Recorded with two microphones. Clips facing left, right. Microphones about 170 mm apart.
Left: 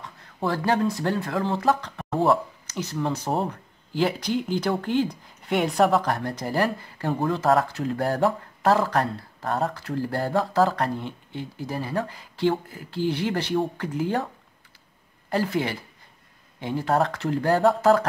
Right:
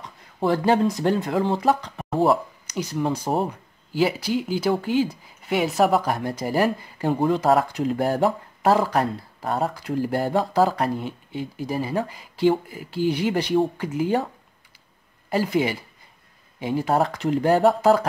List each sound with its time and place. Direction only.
0.0 s speech: 20° right (ahead or behind)
15.2 s speech: 10° right (ahead or behind)